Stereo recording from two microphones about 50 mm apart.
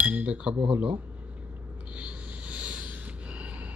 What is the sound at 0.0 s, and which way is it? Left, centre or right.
Speech, right.